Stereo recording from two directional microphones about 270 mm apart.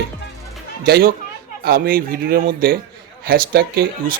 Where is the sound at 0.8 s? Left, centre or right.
Right.